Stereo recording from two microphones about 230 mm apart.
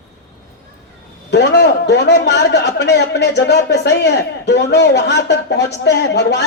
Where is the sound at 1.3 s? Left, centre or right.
Left.